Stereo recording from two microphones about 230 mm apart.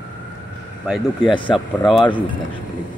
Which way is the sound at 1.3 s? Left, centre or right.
Left.